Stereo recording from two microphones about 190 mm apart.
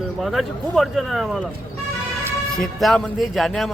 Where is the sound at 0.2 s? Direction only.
Centre (ahead or behind).